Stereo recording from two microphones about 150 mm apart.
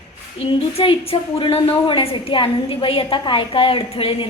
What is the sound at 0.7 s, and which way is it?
A woman's voice, 40° left (ahead or behind).